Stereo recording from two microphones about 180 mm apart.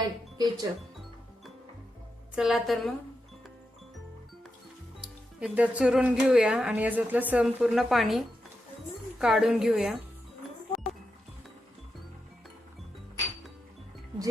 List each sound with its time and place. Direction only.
0.3 s speech: 20° right (ahead or behind)
2.3 s speech: centre (ahead or behind)
4.9 s speech: 5° right (ahead or behind)